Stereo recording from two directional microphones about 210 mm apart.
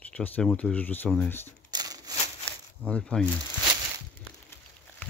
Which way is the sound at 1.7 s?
20° right (ahead or behind).